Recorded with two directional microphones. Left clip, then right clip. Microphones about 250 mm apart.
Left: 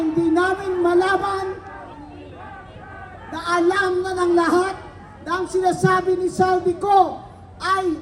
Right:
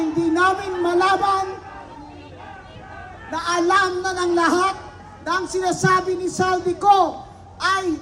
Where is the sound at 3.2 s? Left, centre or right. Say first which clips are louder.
Even; centre.